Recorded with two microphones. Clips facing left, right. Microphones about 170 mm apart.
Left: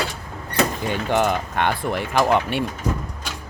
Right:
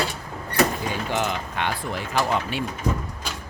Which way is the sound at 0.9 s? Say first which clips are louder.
Left 5 dB; 55° left (ahead or behind).